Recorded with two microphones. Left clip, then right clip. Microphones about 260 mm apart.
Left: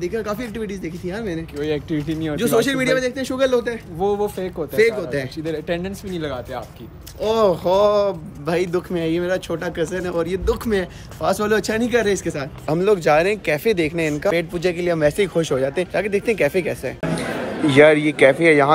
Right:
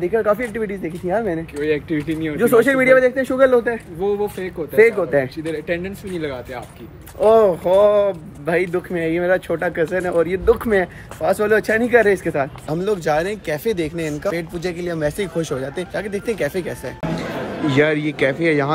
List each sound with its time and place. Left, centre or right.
0.0 s speech: centre
1.6 s speech: centre
2.3 s speech: centre
4.0 s speech: centre
4.7 s speech: centre
5.4 s speech: centre